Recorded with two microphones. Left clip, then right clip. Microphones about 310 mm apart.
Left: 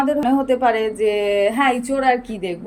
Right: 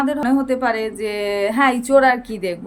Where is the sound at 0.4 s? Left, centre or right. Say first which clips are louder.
Left 3 dB; centre.